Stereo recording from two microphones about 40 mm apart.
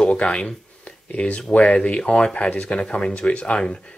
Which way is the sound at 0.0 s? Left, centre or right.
Left.